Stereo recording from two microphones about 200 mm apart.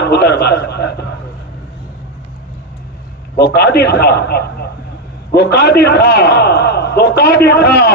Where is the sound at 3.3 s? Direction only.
55° left (ahead or behind).